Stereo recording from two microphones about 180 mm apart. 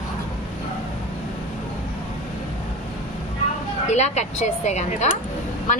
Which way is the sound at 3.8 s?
40° left (ahead or behind).